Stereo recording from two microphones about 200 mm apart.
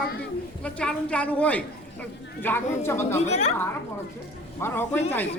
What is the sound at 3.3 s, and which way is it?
Speech, 35° left (ahead or behind).